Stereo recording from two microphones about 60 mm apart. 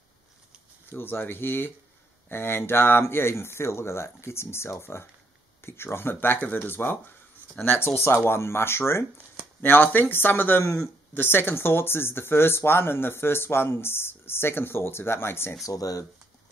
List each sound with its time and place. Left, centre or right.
0.9 s speech: left
9.6 s speech: left
15.6 s speech: left